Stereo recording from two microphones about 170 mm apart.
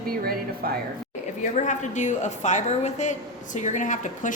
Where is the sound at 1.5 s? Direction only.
45° left (ahead or behind).